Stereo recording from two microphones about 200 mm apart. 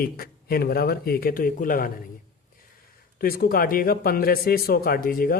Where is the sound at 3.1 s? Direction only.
45° left (ahead or behind).